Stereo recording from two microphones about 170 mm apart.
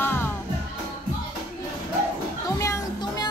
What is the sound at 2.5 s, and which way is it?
Music, 15° left (ahead or behind).